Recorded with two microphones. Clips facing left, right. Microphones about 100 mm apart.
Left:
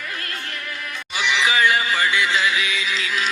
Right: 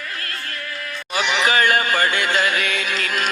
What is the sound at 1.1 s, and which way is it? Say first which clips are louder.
Music: right 2 dB; 50° right (ahead or behind).